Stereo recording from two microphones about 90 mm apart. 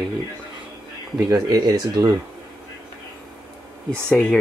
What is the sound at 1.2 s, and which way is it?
Speech, 50° right (ahead or behind).